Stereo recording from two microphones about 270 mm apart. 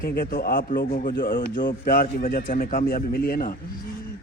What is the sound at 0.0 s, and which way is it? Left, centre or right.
A man's voice, left.